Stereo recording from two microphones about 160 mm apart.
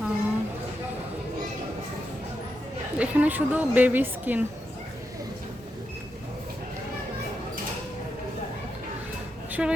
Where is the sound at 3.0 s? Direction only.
10° right (ahead or behind).